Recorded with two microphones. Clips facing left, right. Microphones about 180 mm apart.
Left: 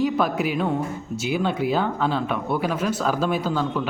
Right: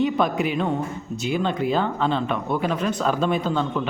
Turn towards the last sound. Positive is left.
turn(degrees=5)  # may be behind; listen again after turning